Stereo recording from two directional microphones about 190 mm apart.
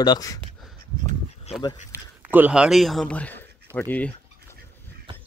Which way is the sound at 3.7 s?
10° left (ahead or behind).